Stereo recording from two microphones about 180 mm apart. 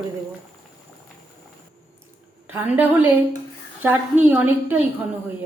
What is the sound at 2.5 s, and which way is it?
A woman's voice, 10° right (ahead or behind).